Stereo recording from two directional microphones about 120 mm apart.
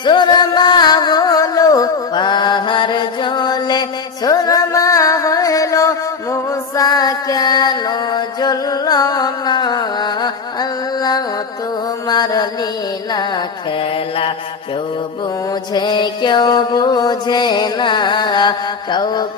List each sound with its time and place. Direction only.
0.0 s music: 40° left (ahead or behind)
12.0 s mantra: 35° left (ahead or behind)
15.7 s music: 40° left (ahead or behind)